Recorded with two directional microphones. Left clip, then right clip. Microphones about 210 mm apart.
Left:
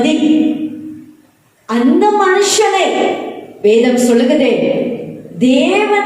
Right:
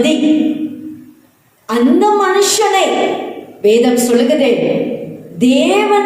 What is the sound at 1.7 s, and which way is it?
Speech, 50° right (ahead or behind).